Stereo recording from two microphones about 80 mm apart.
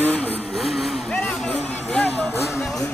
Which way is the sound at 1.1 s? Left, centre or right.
Centre.